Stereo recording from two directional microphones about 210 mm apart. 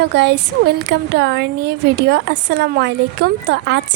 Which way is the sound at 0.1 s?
55° right (ahead or behind).